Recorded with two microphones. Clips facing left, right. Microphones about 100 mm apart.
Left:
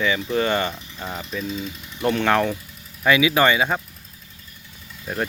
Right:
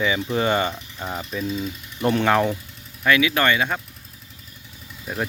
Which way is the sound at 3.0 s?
10° left (ahead or behind).